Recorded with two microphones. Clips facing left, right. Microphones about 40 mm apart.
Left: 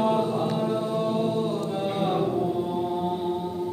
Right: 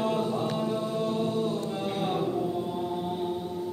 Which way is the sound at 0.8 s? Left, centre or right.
Centre.